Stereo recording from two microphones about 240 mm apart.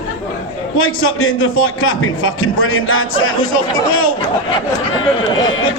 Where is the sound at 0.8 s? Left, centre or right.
Left.